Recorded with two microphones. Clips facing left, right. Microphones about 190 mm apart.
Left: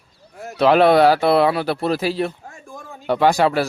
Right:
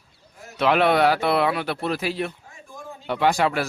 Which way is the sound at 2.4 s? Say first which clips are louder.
Left 3 dB; 55° left (ahead or behind).